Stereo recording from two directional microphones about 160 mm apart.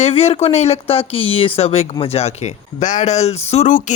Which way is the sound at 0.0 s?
40° left (ahead or behind).